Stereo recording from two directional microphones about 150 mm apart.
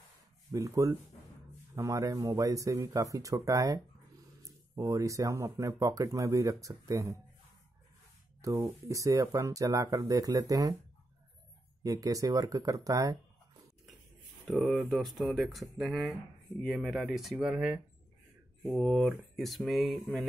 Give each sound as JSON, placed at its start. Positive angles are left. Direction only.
{"t": 0.5, "sound": "speech", "side_deg": -20}
{"t": 8.4, "sound": "speech", "side_deg": -20}
{"t": 11.8, "sound": "speech", "side_deg": -25}
{"t": 14.5, "sound": "speech", "side_deg": 0}